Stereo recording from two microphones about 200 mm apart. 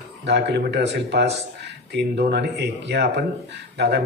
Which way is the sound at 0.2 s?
55° right (ahead or behind).